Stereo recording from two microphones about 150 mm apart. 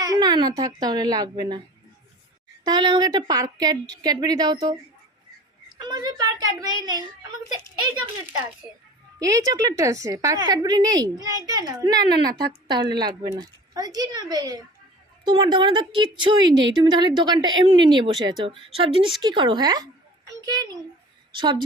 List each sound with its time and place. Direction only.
0.0 s a child's voice: 25° right (ahead or behind)
2.6 s a woman's voice: 30° right (ahead or behind)
5.8 s a woman's voice: 25° right (ahead or behind)
9.1 s a woman's voice: 25° right (ahead or behind)
12.3 s speech: 90° right
12.6 s a woman's voice: 30° right (ahead or behind)